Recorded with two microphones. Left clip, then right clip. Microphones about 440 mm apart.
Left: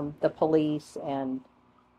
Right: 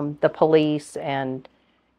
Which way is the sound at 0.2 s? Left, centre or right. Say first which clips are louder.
Right 7 dB; right.